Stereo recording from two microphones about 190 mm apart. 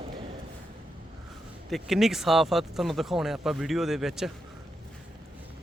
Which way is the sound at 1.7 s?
Centre (ahead or behind).